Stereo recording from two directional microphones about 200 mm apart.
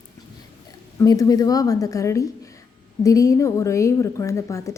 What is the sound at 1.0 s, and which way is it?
A woman's voice, 15° left (ahead or behind).